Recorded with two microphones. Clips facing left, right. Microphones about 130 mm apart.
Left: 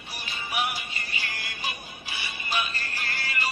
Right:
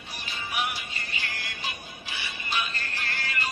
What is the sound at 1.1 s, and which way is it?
Music, 10° left (ahead or behind).